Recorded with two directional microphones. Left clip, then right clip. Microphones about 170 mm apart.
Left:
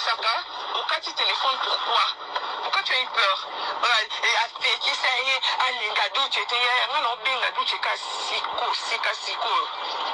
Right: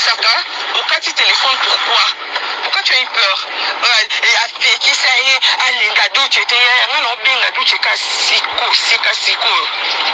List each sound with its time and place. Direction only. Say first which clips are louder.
0.0 s radio: right 11 dB; 20° right (ahead or behind)
2.7 s speech: right 10 dB; 20° right (ahead or behind)